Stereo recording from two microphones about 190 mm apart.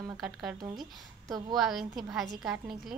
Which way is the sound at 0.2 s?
5° right (ahead or behind).